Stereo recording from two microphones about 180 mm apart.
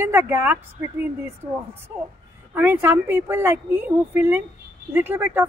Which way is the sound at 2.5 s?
10° right (ahead or behind).